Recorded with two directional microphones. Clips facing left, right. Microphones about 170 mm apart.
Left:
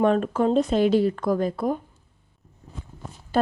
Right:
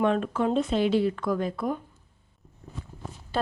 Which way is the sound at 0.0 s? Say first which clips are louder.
Left 4 dB; 40° left (ahead or behind).